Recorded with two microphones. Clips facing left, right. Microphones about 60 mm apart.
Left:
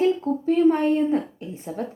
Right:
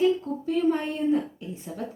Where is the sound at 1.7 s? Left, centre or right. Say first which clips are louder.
Left 6 dB; left.